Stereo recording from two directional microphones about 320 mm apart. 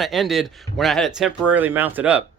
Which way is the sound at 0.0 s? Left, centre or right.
Centre.